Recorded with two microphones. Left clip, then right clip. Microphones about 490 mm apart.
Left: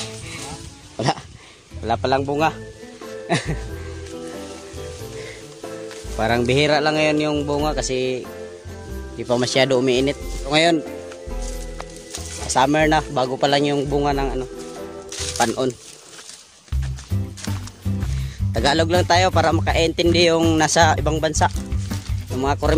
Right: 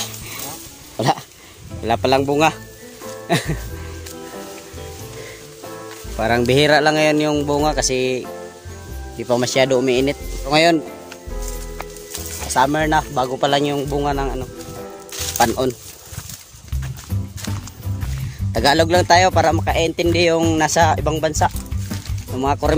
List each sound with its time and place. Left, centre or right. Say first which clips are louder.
0.9 s speech: right 4 dB; left
3.3 s music: right 2 dB; left
6.1 s speech: right 2 dB; left
9.3 s speech: right 2 dB; left
12.5 s speech: even; left
18.5 s speech: right 3 dB; left